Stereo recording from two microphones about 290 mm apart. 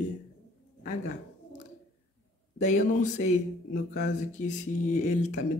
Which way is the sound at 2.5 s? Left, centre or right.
Left.